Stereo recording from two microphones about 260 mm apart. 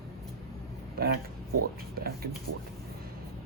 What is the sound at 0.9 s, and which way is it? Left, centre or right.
Speech, right.